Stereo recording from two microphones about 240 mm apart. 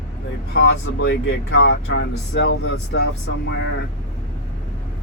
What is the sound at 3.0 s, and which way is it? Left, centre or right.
Speech, left.